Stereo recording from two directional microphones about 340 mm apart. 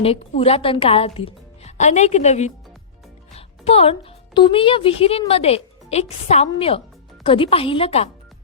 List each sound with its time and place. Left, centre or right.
0.0 s a woman's voice: centre